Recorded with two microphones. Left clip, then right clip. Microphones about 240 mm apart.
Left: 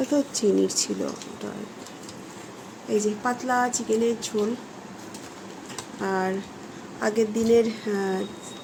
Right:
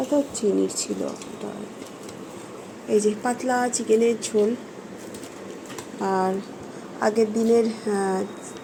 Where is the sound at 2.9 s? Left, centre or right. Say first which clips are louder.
Right 3 dB; centre.